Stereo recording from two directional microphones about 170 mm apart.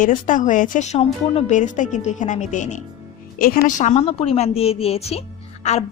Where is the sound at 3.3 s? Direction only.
60° left (ahead or behind); by 5.8 s 40° left (ahead or behind).